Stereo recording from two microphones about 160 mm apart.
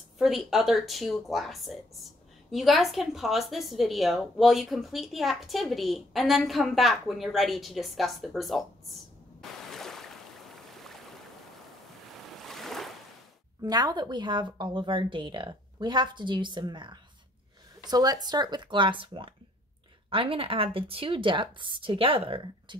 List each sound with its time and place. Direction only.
0.2 s a woman's voice: centre (ahead or behind)
9.4 s a sound: centre (ahead or behind)
10.7 s boat: centre (ahead or behind)
12.3 s waves: centre (ahead or behind)
13.6 s a woman's voice: 25° right (ahead or behind)